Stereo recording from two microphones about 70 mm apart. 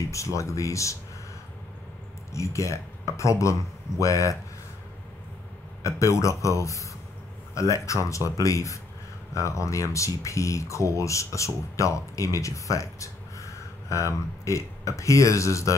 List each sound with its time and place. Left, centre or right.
0.1 s speech: left
2.3 s speech: left
5.8 s speech: left